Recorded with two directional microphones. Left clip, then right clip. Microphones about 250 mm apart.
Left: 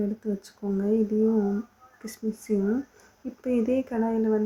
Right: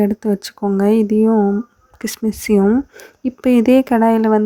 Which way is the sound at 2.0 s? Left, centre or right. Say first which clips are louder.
Right 12 dB; right.